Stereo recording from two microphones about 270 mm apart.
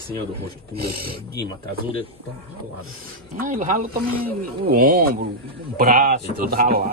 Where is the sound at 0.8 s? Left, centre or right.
Right.